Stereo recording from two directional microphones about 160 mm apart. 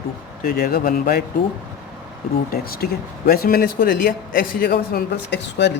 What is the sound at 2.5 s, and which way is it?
Speech, 70° left (ahead or behind).